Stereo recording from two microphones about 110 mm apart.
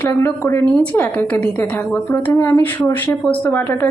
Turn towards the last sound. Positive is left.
turn(degrees=15)  # may be behind; listen again after turning